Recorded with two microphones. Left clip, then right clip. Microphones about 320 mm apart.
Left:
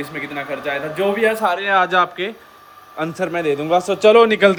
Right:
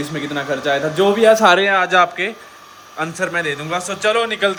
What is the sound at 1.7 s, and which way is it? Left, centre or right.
A man's voice, centre.